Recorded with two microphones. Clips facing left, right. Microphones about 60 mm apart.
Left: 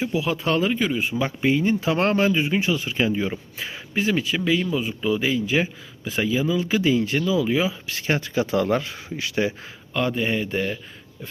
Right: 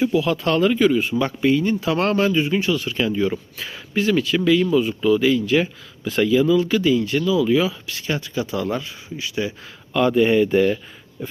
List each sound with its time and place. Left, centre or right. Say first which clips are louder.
0.1 s speech: right 3 dB; centre
1.4 s speech: right 1 dB; left; by 6.5 s centre
6.7 s speech: right 2 dB; left
7.9 s speech: left 1 dB; left
9.9 s speech: right 7 dB; centre